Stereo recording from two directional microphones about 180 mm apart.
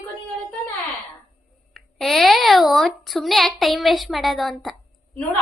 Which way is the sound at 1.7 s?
Centre (ahead or behind).